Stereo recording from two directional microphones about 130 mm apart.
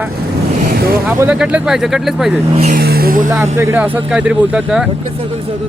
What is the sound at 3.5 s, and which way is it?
Speech, 20° right (ahead or behind).